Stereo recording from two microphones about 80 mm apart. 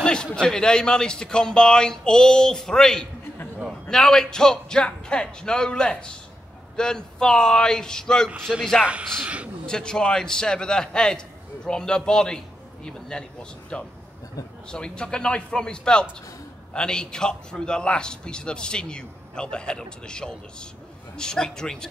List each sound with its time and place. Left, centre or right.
0.0 s a man's voice: centre
8.8 s speech: centre
9.7 s a man's voice: centre